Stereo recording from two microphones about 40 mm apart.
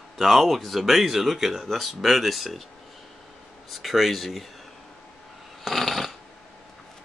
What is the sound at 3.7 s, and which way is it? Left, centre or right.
Speech, centre.